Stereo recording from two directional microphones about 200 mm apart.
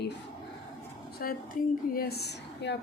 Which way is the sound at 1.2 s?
50° left (ahead or behind).